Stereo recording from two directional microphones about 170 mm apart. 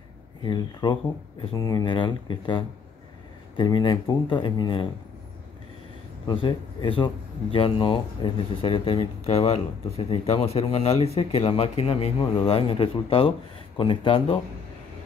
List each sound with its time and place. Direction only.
0.4 s speech: 25° left (ahead or behind)
6.2 s speech: 30° left (ahead or behind)